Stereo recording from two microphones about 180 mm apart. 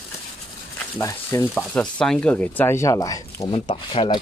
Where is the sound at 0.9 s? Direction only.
15° left (ahead or behind).